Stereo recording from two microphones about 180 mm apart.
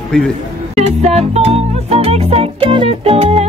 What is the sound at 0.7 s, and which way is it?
Music, 35° right (ahead or behind).